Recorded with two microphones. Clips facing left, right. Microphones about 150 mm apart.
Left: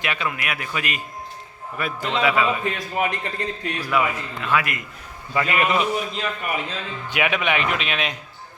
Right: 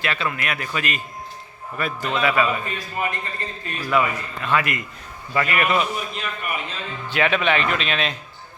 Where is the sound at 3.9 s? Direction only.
10° left (ahead or behind).